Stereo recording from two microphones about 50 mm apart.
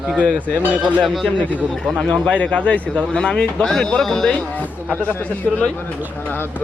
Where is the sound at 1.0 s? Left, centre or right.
Centre.